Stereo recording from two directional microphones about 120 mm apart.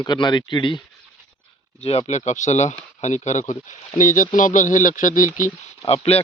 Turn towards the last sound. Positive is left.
turn(degrees=55)  # may be behind; listen again after turning